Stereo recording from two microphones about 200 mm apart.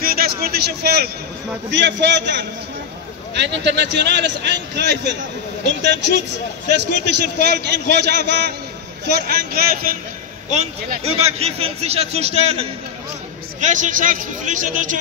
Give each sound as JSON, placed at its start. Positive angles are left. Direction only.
{"t": 0.0, "sound": "a man's voice", "side_deg": -50}
{"t": 7.3, "sound": "a man's voice", "side_deg": -55}
{"t": 10.5, "sound": "a man's voice", "side_deg": -35}